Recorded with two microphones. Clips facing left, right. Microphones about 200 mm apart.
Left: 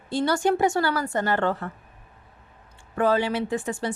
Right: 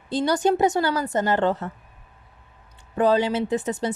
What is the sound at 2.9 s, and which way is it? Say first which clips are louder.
A woman's voice: right 2 dB; 20° right (ahead or behind).